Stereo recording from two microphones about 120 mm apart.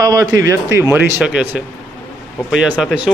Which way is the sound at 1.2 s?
5° right (ahead or behind).